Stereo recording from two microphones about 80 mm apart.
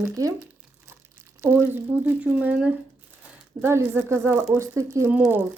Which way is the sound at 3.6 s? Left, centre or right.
Right.